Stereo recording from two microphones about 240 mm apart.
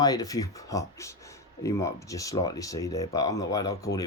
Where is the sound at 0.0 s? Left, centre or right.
Centre.